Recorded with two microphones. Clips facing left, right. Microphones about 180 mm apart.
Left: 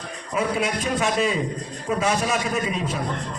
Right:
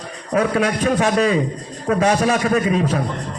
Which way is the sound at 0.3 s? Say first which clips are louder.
Right 6 dB; 70° right (ahead or behind).